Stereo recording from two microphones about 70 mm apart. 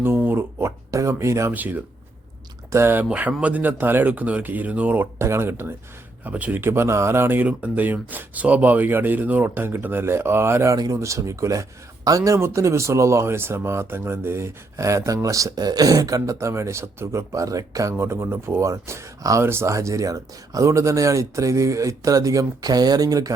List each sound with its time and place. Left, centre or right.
0.0 s speech: right
0.9 s speech: right
1.5 s speech: right
2.7 s speech: right
3.0 s speech: right
5.2 s speech: right
6.2 s speech: right
6.6 s speech: right
7.4 s speech: right
10.8 s speech: right
11.0 s speech: right
17.9 s speech: right